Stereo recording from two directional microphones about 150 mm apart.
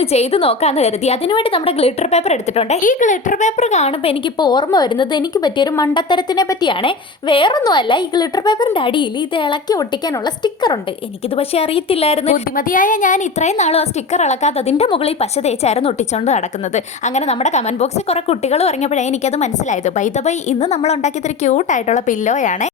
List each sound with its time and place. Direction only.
0.0 s a woman's voice: 45° left (ahead or behind)
11.3 s a woman's voice: 40° left (ahead or behind)
12.5 s a woman's voice: 65° left (ahead or behind)